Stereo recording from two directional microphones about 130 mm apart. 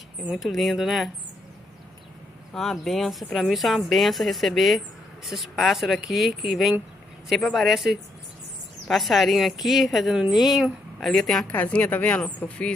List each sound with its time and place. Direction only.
0.3 s speech: centre (ahead or behind)
2.5 s speech: centre (ahead or behind)